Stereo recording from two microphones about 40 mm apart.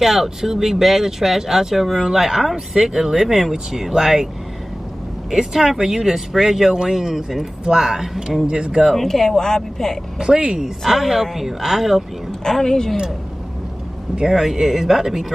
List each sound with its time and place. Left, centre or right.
0.0 s speech: centre
5.3 s speech: centre
8.5 s speech: right
8.9 s speech: centre
10.1 s speech: centre
10.9 s speech: centre
12.3 s speech: centre
14.3 s speech: centre